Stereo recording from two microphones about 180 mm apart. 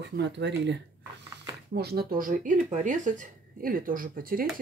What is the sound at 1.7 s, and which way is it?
Speech, 60° right (ahead or behind).